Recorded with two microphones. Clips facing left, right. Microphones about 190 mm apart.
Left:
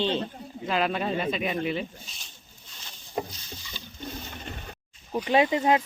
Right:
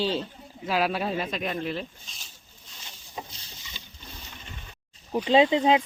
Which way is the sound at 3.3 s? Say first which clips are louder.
Left 4 dB; 30° right (ahead or behind).